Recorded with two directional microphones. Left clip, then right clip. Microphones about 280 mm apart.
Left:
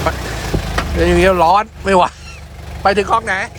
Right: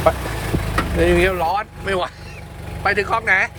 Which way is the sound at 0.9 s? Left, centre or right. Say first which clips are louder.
Left 5 dB; centre.